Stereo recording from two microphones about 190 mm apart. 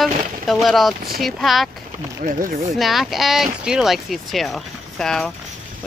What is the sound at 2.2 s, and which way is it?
Speech, 45° right (ahead or behind).